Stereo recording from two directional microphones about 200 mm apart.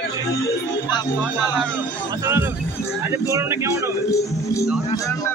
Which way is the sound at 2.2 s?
10° right (ahead or behind).